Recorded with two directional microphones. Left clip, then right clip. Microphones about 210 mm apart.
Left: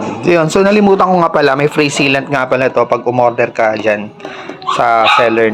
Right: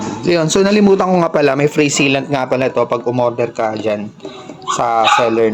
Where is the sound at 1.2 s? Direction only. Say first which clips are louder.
Left 3 dB; 20° right (ahead or behind).